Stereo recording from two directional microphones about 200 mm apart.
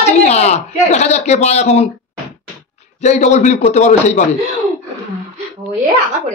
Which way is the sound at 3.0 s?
35° left (ahead or behind).